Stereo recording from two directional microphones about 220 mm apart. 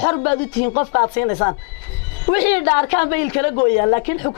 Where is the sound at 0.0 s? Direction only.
20° left (ahead or behind).